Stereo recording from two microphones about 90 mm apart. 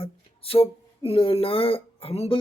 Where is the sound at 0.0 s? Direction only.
90° left.